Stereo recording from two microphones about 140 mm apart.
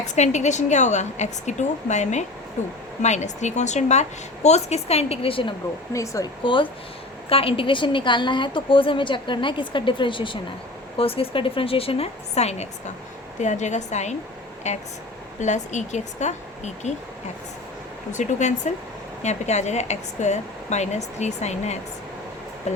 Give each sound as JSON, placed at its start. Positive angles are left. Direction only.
{"t": 0.0, "sound": "a woman's voice", "side_deg": 55}
{"t": 5.9, "sound": "speech", "side_deg": 20}
{"t": 6.4, "sound": "a woman's voice", "side_deg": 35}
{"t": 18.1, "sound": "a woman's voice", "side_deg": 60}